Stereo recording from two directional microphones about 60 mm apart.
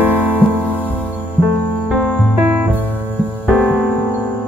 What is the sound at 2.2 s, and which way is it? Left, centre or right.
Music, centre.